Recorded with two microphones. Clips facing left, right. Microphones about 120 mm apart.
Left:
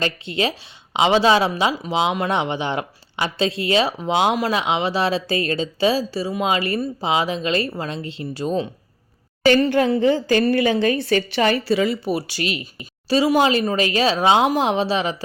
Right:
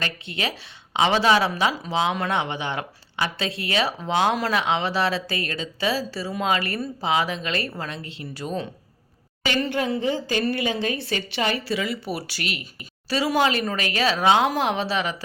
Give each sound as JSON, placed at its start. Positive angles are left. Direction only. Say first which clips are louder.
{"t": 0.0, "sound": "speech", "louder": "left 7 dB", "side_deg": 25}
{"t": 9.4, "sound": "a woman's voice", "louder": "left 9 dB", "side_deg": 40}
{"t": 11.7, "sound": "speech", "louder": "left 7 dB", "side_deg": 35}
{"t": 12.0, "sound": "speech", "louder": "left 6 dB", "side_deg": 20}